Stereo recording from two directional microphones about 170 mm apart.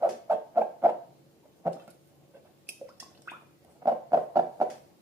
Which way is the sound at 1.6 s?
15° right (ahead or behind).